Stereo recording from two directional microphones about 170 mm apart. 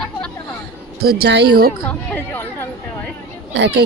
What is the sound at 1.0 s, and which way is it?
Speech, 80° right.